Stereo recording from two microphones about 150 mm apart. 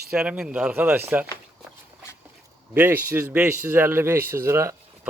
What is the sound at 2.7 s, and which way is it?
A man's voice, 15° right (ahead or behind).